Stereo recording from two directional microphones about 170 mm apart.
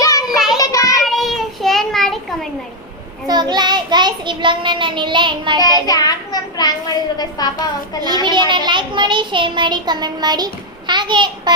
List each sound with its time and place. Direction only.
0.0 s child singing: 20° left (ahead or behind)
0.3 s child singing: centre (ahead or behind)
0.6 s child singing: 20° left (ahead or behind)
1.0 s child singing: centre (ahead or behind)
3.2 s a child's voice: 25° right (ahead or behind)
5.8 s a child's voice: 20° left (ahead or behind)
8.2 s a child's voice: 25° right (ahead or behind)